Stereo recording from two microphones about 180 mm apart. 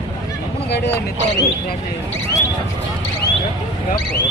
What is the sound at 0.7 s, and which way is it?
Speech, 65° left (ahead or behind).